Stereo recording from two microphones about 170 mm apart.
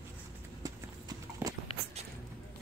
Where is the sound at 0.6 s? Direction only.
20° right (ahead or behind).